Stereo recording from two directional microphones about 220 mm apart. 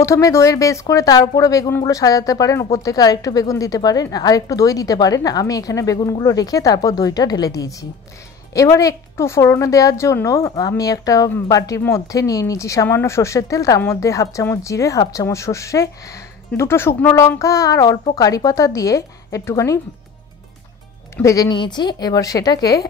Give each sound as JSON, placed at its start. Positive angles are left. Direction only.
{"t": 0.0, "sound": "a woman's voice", "side_deg": 15}
{"t": 21.2, "sound": "a woman's voice", "side_deg": 15}